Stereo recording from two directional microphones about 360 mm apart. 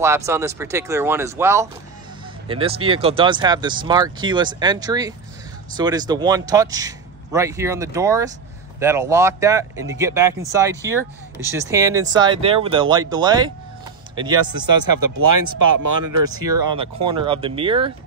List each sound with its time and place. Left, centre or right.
0.0 s speech: centre
14.8 s speech: right
16.7 s speech: centre